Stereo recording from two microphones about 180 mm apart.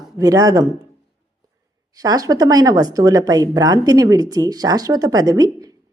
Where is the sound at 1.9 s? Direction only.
20° right (ahead or behind).